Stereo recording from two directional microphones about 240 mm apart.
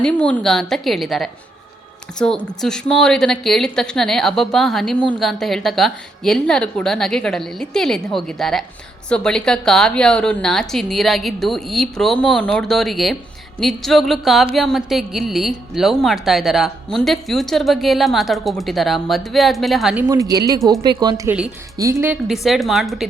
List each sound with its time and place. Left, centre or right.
0.0 s a woman's voice: centre